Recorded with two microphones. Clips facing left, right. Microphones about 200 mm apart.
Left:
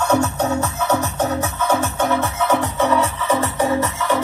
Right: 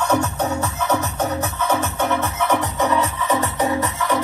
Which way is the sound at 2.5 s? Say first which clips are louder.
Left 2 dB; 15° right (ahead or behind).